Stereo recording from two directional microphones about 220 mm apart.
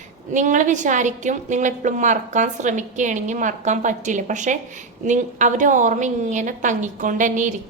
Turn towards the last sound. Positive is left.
turn(degrees=-35)  # may be behind; listen again after turning